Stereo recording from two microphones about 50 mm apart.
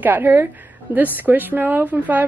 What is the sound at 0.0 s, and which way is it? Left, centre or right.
A woman's voice, right.